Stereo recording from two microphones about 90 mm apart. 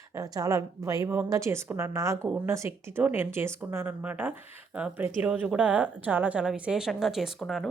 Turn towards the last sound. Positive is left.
turn(degrees=0)  # may be behind; listen again after turning